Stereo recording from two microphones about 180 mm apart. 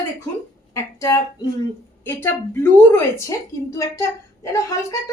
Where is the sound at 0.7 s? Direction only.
20° left (ahead or behind).